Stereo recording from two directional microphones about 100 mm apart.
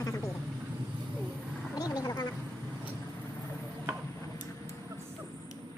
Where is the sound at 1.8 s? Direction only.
40° left (ahead or behind).